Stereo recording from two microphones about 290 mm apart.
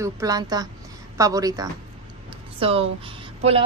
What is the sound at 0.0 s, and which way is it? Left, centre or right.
A woman's voice, centre.